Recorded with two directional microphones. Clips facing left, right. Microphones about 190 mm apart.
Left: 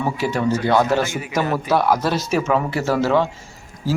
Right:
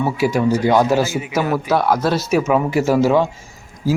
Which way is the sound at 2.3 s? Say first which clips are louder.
Right 5 dB; 10° right (ahead or behind).